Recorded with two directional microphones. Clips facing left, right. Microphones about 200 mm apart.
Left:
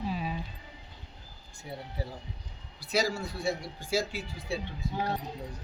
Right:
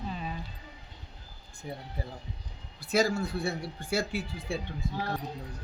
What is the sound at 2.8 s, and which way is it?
Speech, 50° right (ahead or behind).